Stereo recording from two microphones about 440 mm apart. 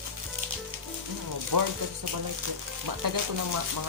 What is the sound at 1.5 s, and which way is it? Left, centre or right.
Speech, right.